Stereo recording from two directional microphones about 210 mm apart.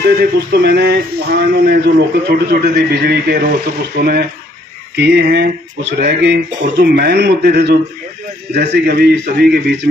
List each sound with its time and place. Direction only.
0.0 s a man's voice: 45° right (ahead or behind)